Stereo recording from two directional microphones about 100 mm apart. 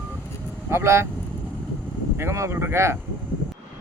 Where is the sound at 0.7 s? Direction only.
25° right (ahead or behind).